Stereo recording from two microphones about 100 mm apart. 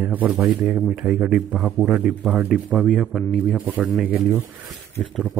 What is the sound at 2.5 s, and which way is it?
Speech, centre (ahead or behind).